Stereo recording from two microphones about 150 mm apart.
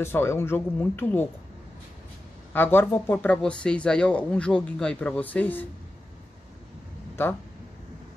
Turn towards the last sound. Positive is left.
turn(degrees=15)  # may be behind; listen again after turning